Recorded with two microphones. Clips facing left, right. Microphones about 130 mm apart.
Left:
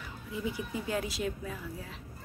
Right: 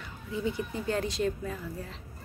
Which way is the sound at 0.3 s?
5° left (ahead or behind).